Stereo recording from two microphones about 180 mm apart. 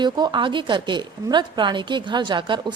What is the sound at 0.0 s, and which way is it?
A woman's voice, 25° right (ahead or behind).